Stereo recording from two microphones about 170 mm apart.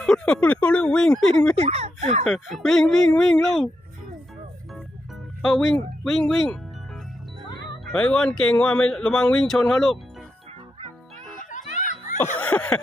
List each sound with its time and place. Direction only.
0.0 s speech: 5° left (ahead or behind)
1.5 s speech: 35° right (ahead or behind)
2.3 s speech: centre (ahead or behind)
5.4 s speech: centre (ahead or behind)
7.9 s speech: 5° left (ahead or behind)
11.7 s a sound: 45° left (ahead or behind)
12.4 s speech: 10° left (ahead or behind)